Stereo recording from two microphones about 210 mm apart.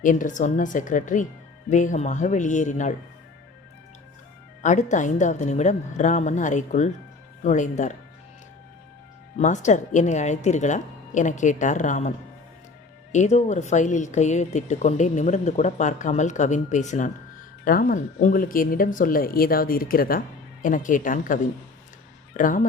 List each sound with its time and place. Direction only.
0.0 s a woman's voice: 40° left (ahead or behind)
4.6 s a woman's voice: 35° left (ahead or behind)
9.4 s a woman's voice: 35° left (ahead or behind)
22.4 s a woman's voice: 40° left (ahead or behind)